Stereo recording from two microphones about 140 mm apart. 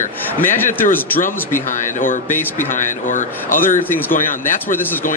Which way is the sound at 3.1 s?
70° left (ahead or behind).